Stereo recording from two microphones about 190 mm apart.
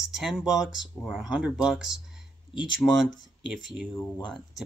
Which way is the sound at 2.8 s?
15° left (ahead or behind).